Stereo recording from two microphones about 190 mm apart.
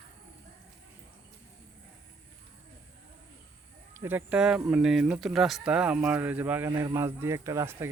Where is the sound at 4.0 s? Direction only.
10° right (ahead or behind).